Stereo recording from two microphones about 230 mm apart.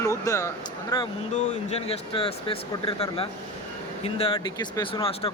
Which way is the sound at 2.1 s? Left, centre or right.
Left.